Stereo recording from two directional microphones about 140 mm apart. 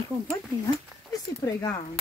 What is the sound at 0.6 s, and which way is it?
Speech, 25° left (ahead or behind).